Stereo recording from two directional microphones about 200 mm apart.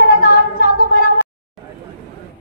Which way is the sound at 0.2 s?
45° left (ahead or behind).